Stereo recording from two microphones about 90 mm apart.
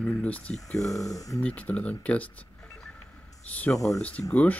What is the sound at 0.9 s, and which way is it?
Speech, 40° left (ahead or behind).